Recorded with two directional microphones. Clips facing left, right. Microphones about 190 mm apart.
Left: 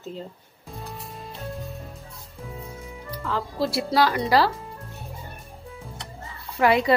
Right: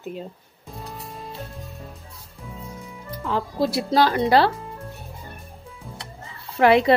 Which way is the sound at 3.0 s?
20° right (ahead or behind).